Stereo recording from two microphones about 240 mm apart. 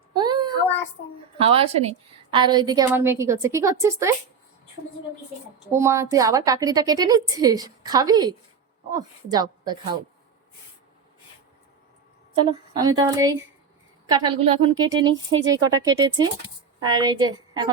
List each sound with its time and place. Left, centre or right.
0.1 s child singing: centre
1.4 s a woman's voice: right
5.7 s a woman's voice: centre
12.4 s a woman's voice: right